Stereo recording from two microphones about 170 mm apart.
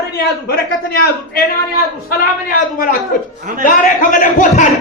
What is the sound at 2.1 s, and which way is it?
Speech, 55° left (ahead or behind).